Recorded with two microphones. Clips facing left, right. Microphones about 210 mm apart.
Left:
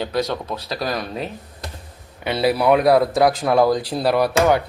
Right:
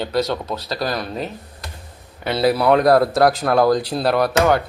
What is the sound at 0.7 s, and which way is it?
Speech, 10° left (ahead or behind).